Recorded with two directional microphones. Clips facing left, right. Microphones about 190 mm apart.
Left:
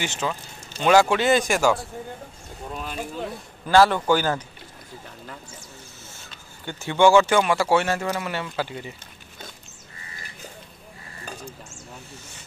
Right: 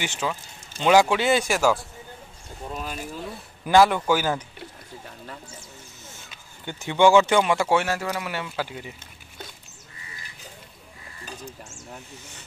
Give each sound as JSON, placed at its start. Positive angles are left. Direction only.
{"t": 0.0, "sound": "speech", "side_deg": -10}
{"t": 6.6, "sound": "speech", "side_deg": -15}
{"t": 7.7, "sound": "speech", "side_deg": -10}